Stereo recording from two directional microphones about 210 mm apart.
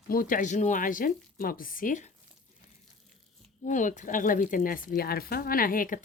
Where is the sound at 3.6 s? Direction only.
35° left (ahead or behind).